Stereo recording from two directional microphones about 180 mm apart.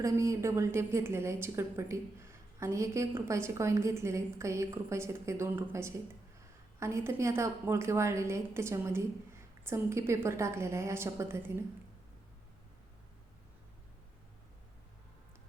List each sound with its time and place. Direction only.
0.0 s a woman's voice: 15° right (ahead or behind)